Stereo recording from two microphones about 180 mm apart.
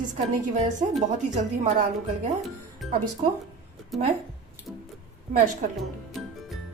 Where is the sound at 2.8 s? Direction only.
Centre (ahead or behind).